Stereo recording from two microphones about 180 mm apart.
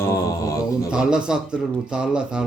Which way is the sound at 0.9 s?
5° right (ahead or behind).